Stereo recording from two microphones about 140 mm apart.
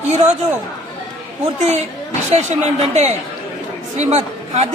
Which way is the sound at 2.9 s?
50° right (ahead or behind).